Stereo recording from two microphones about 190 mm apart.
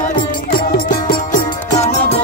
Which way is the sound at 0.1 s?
50° left (ahead or behind).